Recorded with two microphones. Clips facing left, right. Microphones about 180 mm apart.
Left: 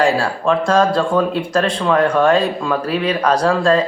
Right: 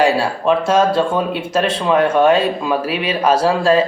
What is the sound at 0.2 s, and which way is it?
Speech, 20° right (ahead or behind).